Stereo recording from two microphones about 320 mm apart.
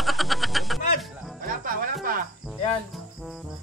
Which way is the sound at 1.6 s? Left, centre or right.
Right.